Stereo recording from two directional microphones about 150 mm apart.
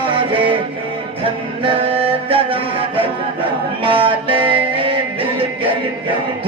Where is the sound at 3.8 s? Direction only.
35° right (ahead or behind).